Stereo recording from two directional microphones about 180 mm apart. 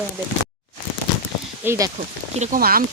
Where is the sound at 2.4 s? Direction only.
50° right (ahead or behind).